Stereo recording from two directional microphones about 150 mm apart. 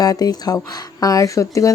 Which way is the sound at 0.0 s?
25° left (ahead or behind).